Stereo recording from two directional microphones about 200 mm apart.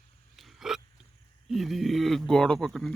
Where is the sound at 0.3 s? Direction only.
Centre (ahead or behind).